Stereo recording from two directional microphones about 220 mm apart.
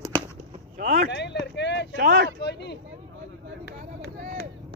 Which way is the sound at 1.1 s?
50° left (ahead or behind).